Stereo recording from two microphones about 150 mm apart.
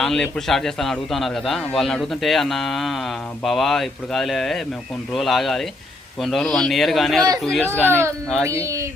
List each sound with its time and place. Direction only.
0.0 s a man's voice: 5° left (ahead or behind)
7.9 s speech: 15° right (ahead or behind)